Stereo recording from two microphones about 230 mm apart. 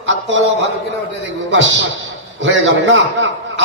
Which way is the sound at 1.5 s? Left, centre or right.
Right.